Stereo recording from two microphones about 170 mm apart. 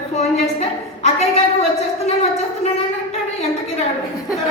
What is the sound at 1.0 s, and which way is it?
Speech, 40° left (ahead or behind).